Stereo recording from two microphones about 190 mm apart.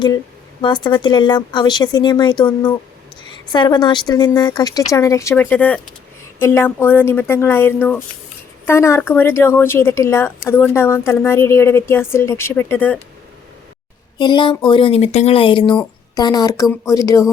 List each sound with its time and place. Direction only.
0.6 s a woman's voice: 25° left (ahead or behind)
14.2 s a woman's voice: 25° left (ahead or behind)